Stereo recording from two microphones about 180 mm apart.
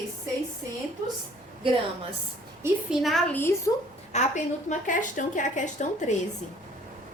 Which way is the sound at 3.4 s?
15° left (ahead or behind).